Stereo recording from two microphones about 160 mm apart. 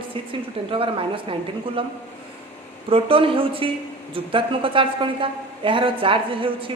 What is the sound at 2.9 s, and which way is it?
A woman's voice, 35° right (ahead or behind).